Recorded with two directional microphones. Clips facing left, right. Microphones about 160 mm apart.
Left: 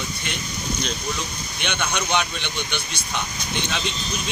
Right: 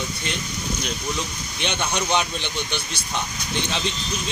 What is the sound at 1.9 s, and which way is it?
A man's voice, 35° right (ahead or behind).